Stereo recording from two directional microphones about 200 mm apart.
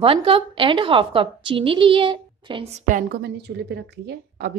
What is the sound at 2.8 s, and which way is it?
A woman's voice, 45° right (ahead or behind).